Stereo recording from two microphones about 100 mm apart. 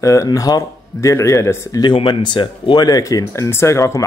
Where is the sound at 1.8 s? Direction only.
55° left (ahead or behind).